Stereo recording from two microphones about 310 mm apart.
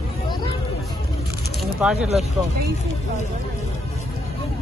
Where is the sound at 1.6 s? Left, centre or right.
Centre.